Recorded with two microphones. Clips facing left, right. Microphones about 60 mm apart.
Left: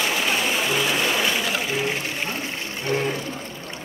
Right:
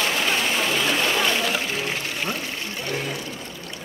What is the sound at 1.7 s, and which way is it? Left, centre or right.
Water, left.